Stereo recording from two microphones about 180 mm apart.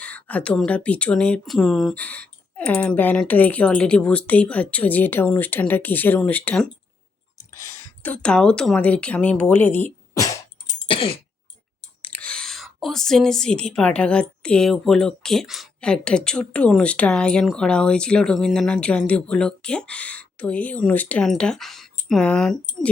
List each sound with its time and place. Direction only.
0.0 s speech: 10° left (ahead or behind)
10.8 s throat clearing: 30° left (ahead or behind)
12.0 s a woman's voice: 10° left (ahead or behind)